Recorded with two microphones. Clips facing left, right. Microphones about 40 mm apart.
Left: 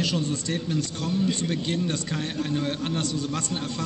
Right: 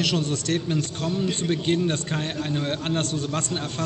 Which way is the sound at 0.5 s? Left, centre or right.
Right.